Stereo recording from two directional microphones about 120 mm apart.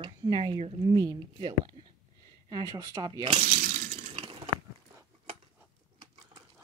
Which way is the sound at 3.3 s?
65° right (ahead or behind).